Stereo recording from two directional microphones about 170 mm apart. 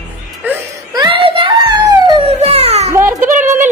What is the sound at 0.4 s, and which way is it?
Wail, 10° right (ahead or behind).